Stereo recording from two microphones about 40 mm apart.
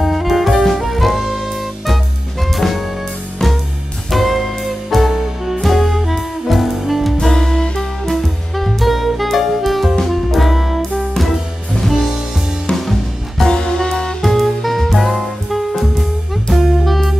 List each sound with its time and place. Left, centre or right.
0.0 s music: centre
2.5 s music: centre
4.1 s music: centre
7.2 s music: centre
8.1 s music: centre
13.5 s music: centre
14.2 s music: centre